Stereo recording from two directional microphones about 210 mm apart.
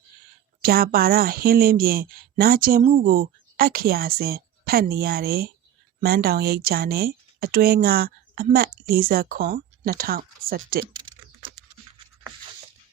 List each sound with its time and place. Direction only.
0.6 s speech: 45° right (ahead or behind)